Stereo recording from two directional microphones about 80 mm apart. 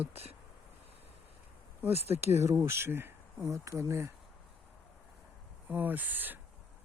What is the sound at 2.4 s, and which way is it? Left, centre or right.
Speech, right.